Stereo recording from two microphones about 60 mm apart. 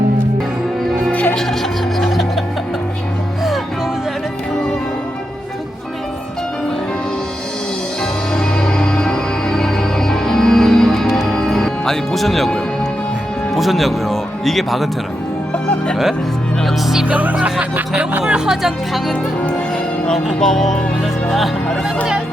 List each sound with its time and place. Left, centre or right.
1.1 s music: left
2.0 s music: centre
8.3 s music: centre
11.3 s music: centre
13.5 s speech: centre
15.5 s music: centre
16.6 s speech: centre
17.1 s speech: right
18.2 s speech: centre
20.4 s music: centre
21.2 s speech: centre